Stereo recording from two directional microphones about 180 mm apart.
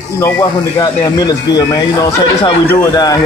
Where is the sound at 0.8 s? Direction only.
20° left (ahead or behind).